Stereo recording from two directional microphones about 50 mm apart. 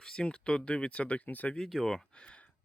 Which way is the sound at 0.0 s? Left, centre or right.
Centre.